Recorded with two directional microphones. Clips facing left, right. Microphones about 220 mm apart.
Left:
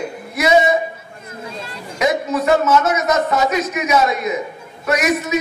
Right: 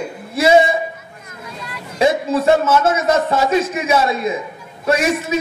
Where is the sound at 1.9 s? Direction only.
30° right (ahead or behind).